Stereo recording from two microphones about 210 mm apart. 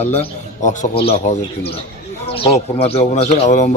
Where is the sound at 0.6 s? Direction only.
35° left (ahead or behind).